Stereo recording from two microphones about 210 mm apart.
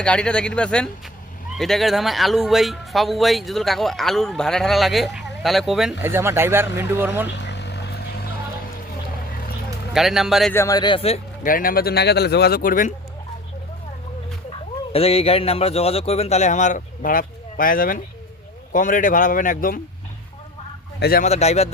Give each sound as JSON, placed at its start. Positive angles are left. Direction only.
{"t": 0.0, "sound": "speech", "side_deg": 5}
{"t": 7.3, "sound": "vehicle", "side_deg": 55}
{"t": 9.9, "sound": "speech", "side_deg": 0}
{"t": 10.5, "sound": "a man's voice", "side_deg": 15}
{"t": 11.4, "sound": "speech", "side_deg": 40}
{"t": 14.9, "sound": "a man's voice", "side_deg": 30}
{"t": 21.0, "sound": "speech", "side_deg": 45}
{"t": 21.2, "sound": "speech", "side_deg": 30}